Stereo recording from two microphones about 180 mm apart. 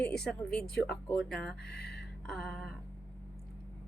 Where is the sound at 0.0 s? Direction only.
5° left (ahead or behind).